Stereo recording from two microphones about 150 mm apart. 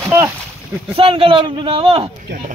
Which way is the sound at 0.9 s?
40° right (ahead or behind).